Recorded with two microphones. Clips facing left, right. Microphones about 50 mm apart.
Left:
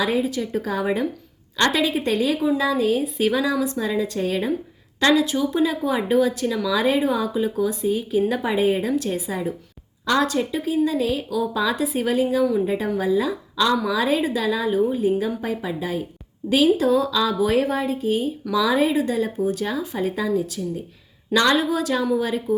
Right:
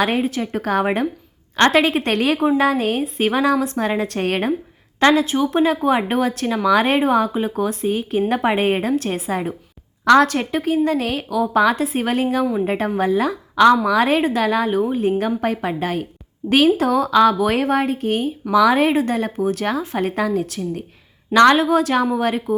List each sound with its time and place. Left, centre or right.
0.0 s speech: right
4.9 s speech: right